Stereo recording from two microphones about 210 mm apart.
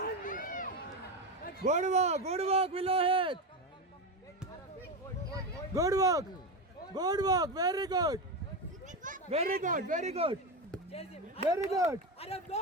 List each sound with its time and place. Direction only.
0.0 s run: 40° left (ahead or behind)
1.6 s speech: 35° right (ahead or behind)
5.7 s speech: 15° right (ahead or behind)
8.9 s speech: 40° right (ahead or behind)
11.4 s speech: 30° left (ahead or behind)
11.7 s speech: 15° right (ahead or behind)
12.2 s speech: 30° left (ahead or behind)